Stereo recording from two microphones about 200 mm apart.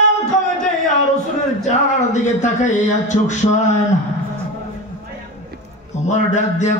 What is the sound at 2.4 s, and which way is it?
Speech, 35° left (ahead or behind).